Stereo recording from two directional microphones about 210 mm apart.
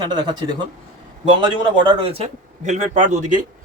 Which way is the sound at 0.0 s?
20° right (ahead or behind).